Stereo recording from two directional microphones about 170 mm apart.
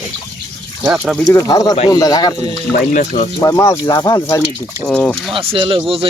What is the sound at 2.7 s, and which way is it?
Speech, 50° left (ahead or behind).